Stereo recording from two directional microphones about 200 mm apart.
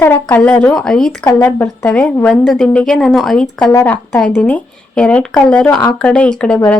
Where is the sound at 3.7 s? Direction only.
15° left (ahead or behind).